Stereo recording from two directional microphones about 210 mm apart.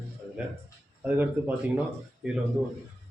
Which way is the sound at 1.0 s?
10° right (ahead or behind).